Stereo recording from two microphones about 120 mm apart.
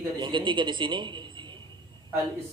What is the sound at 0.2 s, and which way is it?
A man's voice, 40° right (ahead or behind).